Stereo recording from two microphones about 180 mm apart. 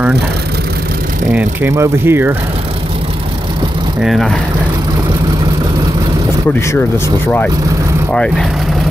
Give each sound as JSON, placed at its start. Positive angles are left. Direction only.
{"t": 1.3, "sound": "speech", "side_deg": -15}
{"t": 4.0, "sound": "speech", "side_deg": 0}
{"t": 8.1, "sound": "speech", "side_deg": 5}